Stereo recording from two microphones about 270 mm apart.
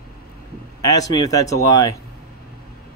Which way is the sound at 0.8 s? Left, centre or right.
Centre.